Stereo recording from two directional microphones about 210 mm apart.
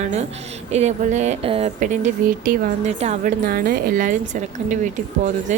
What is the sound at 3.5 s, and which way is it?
Speech, 45° right (ahead or behind).